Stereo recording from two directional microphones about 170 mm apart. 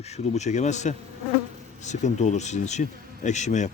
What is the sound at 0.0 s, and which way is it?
Speech, 40° left (ahead or behind).